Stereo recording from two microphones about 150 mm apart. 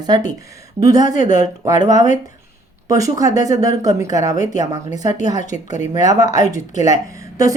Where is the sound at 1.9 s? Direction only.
55° left (ahead or behind).